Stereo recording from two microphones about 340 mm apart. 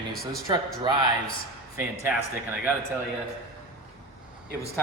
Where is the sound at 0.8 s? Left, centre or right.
Centre.